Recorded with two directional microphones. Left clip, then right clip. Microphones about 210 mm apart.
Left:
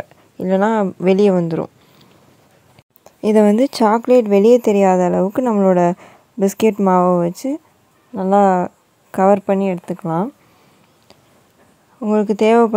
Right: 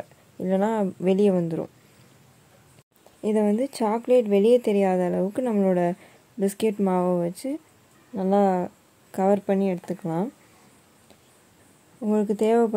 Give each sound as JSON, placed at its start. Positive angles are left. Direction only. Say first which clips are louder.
{"t": 0.4, "sound": "speech", "louder": "left 8 dB", "side_deg": 15}
{"t": 3.2, "sound": "a woman's voice", "louder": "left 10 dB", "side_deg": 40}
{"t": 12.0, "sound": "a woman's voice", "louder": "left 8 dB", "side_deg": 20}